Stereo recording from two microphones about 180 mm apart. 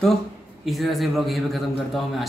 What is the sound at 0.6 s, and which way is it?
A man's voice, centre (ahead or behind).